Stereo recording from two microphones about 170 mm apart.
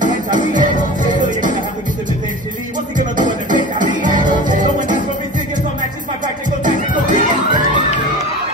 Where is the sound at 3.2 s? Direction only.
50° right (ahead or behind).